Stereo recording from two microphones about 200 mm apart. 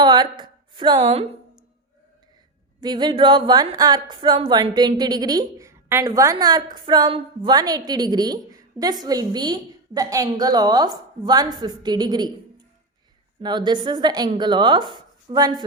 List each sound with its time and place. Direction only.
0.0 s a sound: 20° right (ahead or behind)
2.8 s a woman's voice: 20° right (ahead or behind)
13.4 s a woman's voice: 20° right (ahead or behind)